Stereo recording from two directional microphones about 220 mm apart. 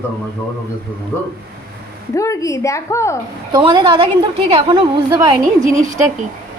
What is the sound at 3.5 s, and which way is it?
A woman's voice, 20° right (ahead or behind).